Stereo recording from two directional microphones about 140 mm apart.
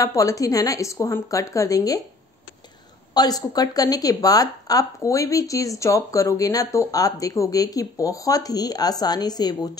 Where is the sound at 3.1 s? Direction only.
25° left (ahead or behind).